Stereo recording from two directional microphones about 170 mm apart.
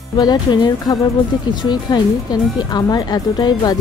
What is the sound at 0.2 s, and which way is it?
Speech, 25° left (ahead or behind).